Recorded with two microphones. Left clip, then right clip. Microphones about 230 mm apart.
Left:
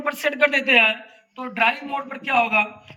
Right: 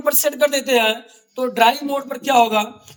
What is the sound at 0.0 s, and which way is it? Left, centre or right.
Speech, right.